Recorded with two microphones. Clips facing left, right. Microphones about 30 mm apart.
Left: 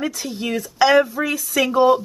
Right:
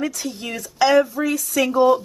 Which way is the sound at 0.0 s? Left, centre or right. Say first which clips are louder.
Left 1 dB; centre.